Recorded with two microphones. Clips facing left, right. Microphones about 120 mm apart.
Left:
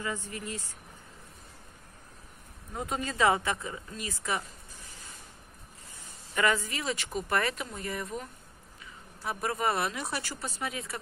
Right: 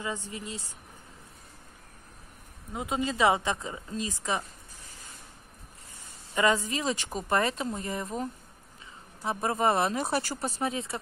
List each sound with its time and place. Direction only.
0.0 s speech: 20° right (ahead or behind)
2.7 s speech: 15° right (ahead or behind)
6.3 s speech: 20° right (ahead or behind)